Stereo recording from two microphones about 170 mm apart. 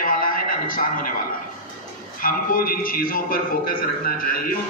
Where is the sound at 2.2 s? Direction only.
55° left (ahead or behind).